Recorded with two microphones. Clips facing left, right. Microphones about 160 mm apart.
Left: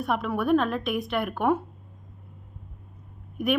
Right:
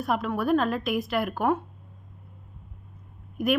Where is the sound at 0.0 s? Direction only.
Centre (ahead or behind).